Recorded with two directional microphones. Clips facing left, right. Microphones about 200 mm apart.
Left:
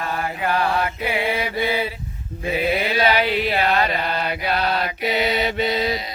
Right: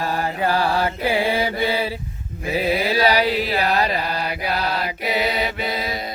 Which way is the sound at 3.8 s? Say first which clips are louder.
Even; 30° right (ahead or behind).